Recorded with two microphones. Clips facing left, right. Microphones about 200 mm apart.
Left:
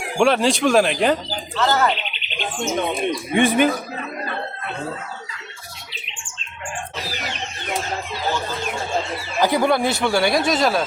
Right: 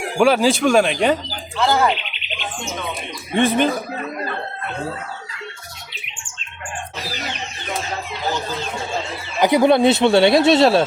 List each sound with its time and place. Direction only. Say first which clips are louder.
0.2 s speech: right 2 dB; centre (ahead or behind)
1.5 s speech: right 2 dB; 10° right (ahead or behind)
3.3 s speech: even; 15° left (ahead or behind)
9.4 s speech: right 5 dB; 20° right (ahead or behind)